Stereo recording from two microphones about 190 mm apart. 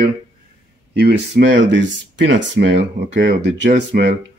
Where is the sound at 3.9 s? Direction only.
50° right (ahead or behind).